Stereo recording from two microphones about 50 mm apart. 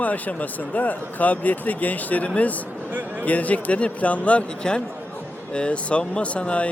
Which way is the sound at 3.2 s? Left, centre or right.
Left.